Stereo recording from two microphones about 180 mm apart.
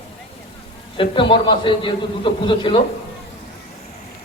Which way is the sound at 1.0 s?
30° left (ahead or behind).